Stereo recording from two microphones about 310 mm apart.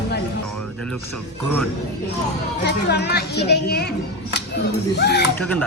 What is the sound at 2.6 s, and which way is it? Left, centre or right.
Speech, left.